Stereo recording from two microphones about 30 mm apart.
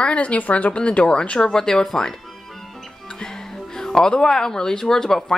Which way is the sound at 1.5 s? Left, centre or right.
Centre.